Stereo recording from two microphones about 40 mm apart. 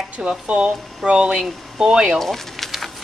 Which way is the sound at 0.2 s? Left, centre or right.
Right.